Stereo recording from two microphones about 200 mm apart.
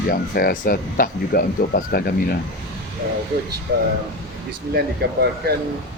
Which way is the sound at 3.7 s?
60° right (ahead or behind).